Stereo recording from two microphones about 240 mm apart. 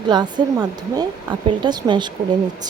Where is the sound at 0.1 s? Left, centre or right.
Centre.